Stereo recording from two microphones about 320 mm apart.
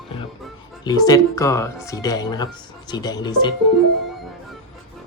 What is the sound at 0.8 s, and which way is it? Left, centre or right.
Speech, centre.